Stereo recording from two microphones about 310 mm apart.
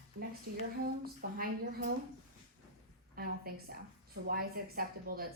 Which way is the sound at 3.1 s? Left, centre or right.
Right.